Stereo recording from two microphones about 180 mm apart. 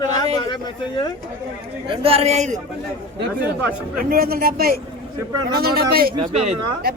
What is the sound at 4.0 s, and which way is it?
A man's voice, 55° right (ahead or behind).